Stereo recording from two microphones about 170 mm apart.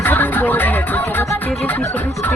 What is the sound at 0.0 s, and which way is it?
Music, 10° left (ahead or behind).